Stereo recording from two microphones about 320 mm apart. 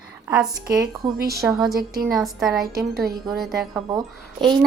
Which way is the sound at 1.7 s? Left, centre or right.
Right.